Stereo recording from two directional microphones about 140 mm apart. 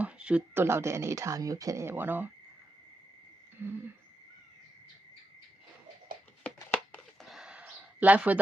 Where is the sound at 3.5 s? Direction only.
15° right (ahead or behind).